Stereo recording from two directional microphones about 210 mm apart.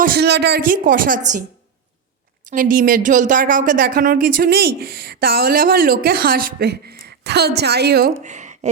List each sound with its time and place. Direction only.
0.0 s a woman's voice: 50° right (ahead or behind)
2.5 s speech: 40° right (ahead or behind)